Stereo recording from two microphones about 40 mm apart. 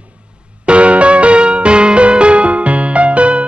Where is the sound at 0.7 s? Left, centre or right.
Right.